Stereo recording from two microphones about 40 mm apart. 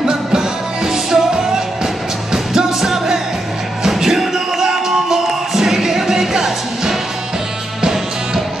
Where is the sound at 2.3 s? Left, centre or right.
Centre.